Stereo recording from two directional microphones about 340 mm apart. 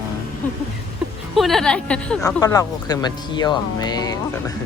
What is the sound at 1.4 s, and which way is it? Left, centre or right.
Speech, centre.